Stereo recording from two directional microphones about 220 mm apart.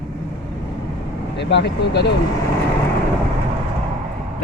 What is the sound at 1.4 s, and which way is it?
Speech, 50° left (ahead or behind).